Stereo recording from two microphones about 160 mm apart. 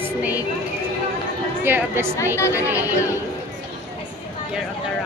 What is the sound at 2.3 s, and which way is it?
Speech, 15° left (ahead or behind).